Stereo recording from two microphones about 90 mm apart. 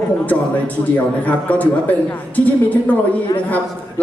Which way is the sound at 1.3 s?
15° left (ahead or behind).